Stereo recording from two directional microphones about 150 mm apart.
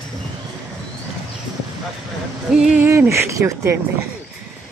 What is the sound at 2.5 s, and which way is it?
Speech, 5° right (ahead or behind).